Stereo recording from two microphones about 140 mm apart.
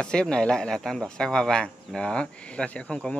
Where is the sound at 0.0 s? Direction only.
5° left (ahead or behind).